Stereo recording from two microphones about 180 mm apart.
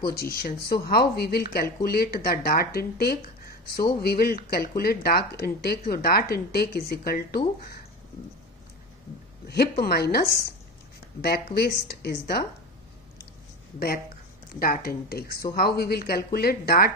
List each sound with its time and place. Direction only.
0.0 s speech: 55° left (ahead or behind)
9.5 s speech: 60° left (ahead or behind)
14.6 s speech: 55° left (ahead or behind)